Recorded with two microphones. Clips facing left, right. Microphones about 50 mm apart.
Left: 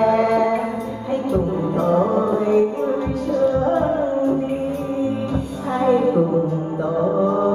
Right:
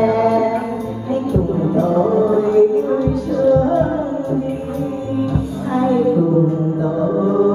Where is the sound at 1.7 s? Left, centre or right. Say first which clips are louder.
Right 1 dB; left.